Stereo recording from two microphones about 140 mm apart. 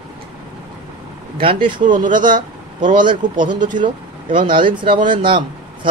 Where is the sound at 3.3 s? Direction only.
65° right (ahead or behind).